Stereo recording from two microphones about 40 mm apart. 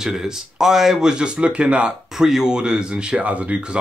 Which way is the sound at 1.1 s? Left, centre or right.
Right.